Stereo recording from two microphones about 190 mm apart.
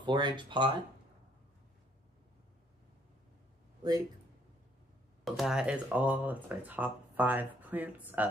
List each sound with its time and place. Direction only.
0.0 s speech: 25° right (ahead or behind)
5.2 s speech: centre (ahead or behind)